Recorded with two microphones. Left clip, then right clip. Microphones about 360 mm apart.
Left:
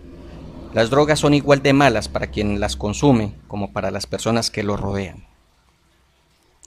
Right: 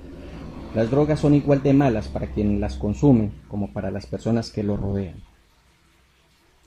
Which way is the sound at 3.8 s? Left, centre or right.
Left.